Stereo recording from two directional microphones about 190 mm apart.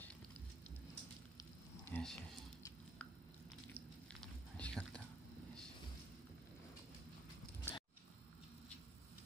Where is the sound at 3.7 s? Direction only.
5° left (ahead or behind).